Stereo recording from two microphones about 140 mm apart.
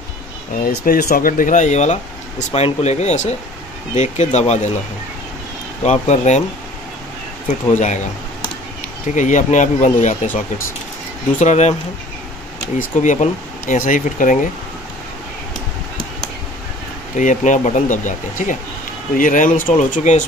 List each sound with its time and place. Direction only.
0.7 s speech: 90° left; by 4.6 s 55° left (ahead or behind)
5.9 s speech: 55° left (ahead or behind)
7.4 s speech: 60° left (ahead or behind)
9.0 s speech: 60° left (ahead or behind)
11.3 s speech: 55° left (ahead or behind)
12.7 s speech: 60° left (ahead or behind)
17.2 s speech: 60° left (ahead or behind)